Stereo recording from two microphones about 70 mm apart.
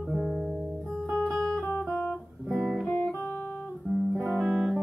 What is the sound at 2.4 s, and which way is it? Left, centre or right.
Guitar, centre.